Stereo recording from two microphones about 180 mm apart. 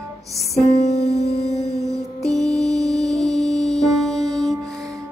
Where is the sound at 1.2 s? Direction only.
35° left (ahead or behind).